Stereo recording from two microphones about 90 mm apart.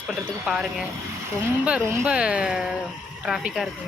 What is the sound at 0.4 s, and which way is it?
Speech, 10° right (ahead or behind).